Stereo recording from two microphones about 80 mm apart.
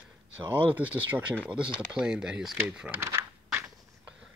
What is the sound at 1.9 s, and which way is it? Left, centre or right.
Speech, centre.